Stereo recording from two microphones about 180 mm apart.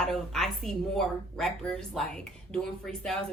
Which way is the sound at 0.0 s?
Centre (ahead or behind).